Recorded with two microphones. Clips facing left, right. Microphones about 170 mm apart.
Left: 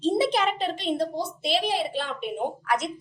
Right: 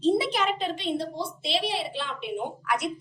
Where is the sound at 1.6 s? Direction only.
45° left (ahead or behind).